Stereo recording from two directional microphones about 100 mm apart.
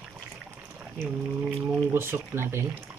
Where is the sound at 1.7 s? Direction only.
25° right (ahead or behind).